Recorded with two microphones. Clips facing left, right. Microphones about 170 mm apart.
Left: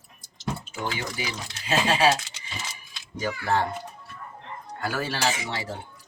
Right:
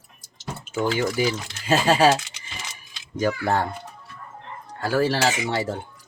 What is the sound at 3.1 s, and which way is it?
Speech, 45° right (ahead or behind).